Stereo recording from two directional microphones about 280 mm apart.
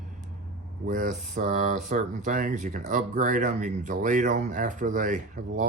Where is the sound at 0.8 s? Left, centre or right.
Right.